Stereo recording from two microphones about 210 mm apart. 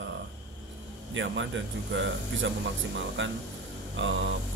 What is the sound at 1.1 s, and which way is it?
Speech, 60° right (ahead or behind).